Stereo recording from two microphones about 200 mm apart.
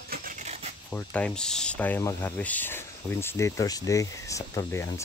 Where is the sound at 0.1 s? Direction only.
45° right (ahead or behind).